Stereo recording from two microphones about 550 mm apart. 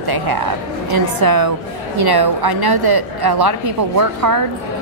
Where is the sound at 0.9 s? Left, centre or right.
Right.